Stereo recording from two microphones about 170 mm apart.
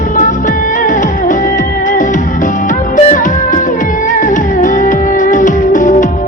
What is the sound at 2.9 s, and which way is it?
Music, 45° left (ahead or behind).